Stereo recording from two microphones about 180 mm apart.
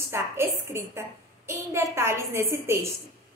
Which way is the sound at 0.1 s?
15° right (ahead or behind).